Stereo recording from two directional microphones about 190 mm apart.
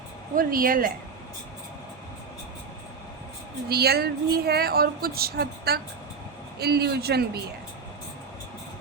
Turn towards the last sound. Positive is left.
turn(degrees=-55)  # may be behind; listen again after turning